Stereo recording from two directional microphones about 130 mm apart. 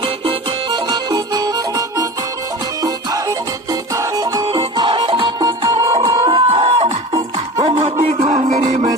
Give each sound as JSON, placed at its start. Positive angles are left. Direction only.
{"t": 0.0, "sound": "music", "side_deg": -45}
{"t": 6.4, "sound": "music", "side_deg": -50}
{"t": 8.2, "sound": "music", "side_deg": -70}